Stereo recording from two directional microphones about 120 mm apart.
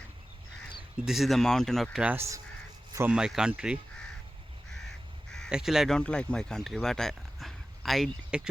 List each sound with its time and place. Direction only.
0.9 s speech: 5° right (ahead or behind)
2.0 s speech: 20° right (ahead or behind)
3.1 s speech: 5° right (ahead or behind)
5.5 s speech: 5° right (ahead or behind)
6.0 s speech: 10° left (ahead or behind)